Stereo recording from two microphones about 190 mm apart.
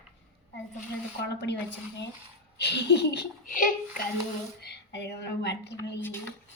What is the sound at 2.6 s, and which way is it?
A woman's voice, 65° left (ahead or behind).